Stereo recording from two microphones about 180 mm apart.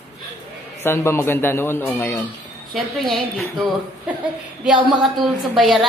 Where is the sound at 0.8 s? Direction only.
15° left (ahead or behind).